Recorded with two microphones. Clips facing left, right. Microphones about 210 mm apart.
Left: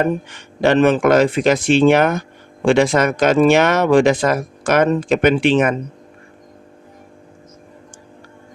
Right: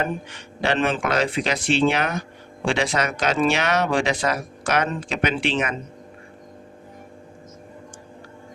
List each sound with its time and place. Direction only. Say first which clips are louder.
0.0 s speech: left 8 dB; 50° left (ahead or behind)